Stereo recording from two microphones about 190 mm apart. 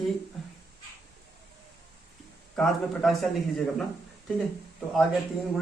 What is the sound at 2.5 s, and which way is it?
Speech, 5° left (ahead or behind).